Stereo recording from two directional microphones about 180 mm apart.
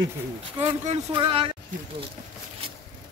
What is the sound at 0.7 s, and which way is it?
Speech, 30° right (ahead or behind).